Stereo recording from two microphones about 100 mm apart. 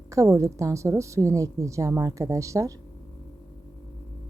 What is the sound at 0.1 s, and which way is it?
A woman's voice, 30° right (ahead or behind).